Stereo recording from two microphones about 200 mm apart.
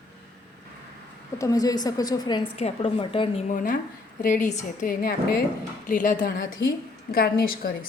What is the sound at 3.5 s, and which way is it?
A woman's voice, 45° left (ahead or behind).